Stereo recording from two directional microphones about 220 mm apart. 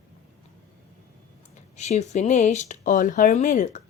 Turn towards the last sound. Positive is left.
turn(degrees=35)  # may be behind; listen again after turning